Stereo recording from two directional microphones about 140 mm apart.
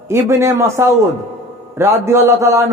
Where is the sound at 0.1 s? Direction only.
20° right (ahead or behind).